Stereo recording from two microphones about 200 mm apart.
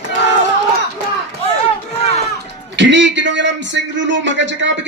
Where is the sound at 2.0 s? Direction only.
30° left (ahead or behind).